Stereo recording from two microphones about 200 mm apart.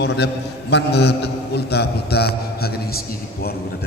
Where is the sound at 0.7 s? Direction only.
55° left (ahead or behind).